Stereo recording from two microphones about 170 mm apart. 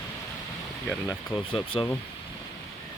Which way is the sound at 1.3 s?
30° left (ahead or behind).